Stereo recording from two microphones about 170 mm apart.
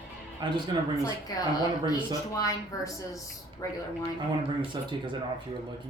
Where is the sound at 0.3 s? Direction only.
25° right (ahead or behind).